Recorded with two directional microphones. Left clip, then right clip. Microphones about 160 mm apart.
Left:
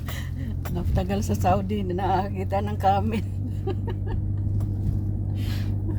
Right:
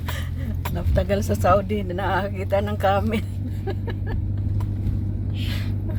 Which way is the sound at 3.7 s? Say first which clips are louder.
Right 1 dB; 25° left (ahead or behind).